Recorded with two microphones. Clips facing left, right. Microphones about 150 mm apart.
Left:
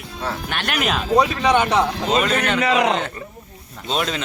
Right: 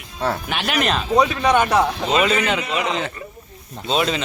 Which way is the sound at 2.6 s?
90° left.